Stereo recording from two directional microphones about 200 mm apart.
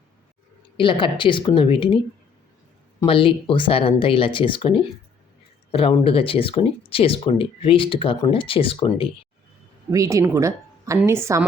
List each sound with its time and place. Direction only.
0.8 s speech: 25° left (ahead or behind)
3.1 s speech: 25° left (ahead or behind)
9.9 s a woman's voice: 15° right (ahead or behind)